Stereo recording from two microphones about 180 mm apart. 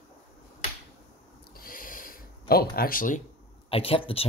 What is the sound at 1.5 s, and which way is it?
Owl, 55° left (ahead or behind).